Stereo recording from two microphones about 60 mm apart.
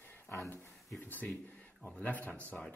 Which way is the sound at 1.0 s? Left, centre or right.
Left.